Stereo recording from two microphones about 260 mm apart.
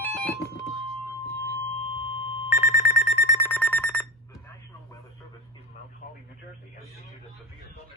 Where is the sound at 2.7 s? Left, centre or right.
Left.